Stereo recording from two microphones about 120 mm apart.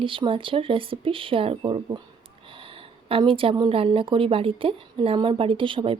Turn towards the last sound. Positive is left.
turn(degrees=-45)  # may be behind; listen again after turning